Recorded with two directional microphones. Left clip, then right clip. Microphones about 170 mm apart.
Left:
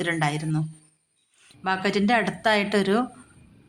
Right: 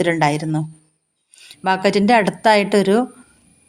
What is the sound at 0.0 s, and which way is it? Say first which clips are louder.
A woman's voice: right 9 dB; 35° right (ahead or behind).